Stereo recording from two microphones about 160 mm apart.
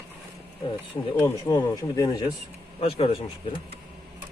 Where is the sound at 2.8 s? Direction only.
35° left (ahead or behind).